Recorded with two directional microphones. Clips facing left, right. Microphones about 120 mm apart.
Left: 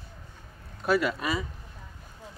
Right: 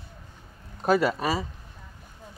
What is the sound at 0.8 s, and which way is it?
Speech, 40° right (ahead or behind).